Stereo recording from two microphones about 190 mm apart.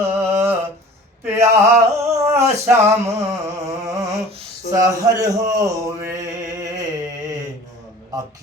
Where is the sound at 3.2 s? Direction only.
15° right (ahead or behind).